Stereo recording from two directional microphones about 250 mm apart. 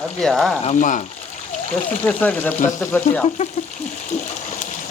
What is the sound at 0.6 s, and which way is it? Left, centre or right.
Speech, left.